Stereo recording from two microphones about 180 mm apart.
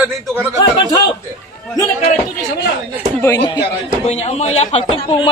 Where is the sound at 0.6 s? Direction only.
20° left (ahead or behind).